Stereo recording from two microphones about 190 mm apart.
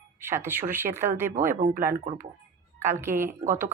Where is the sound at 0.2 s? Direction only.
10° right (ahead or behind).